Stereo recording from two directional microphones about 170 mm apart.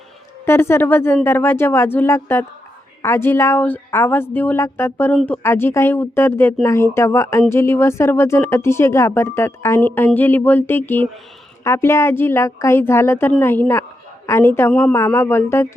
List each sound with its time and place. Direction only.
0.4 s speech: 15° left (ahead or behind)
14.9 s speech: 15° left (ahead or behind)